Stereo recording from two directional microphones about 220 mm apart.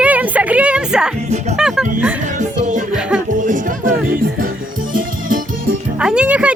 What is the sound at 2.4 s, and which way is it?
Music, 35° right (ahead or behind).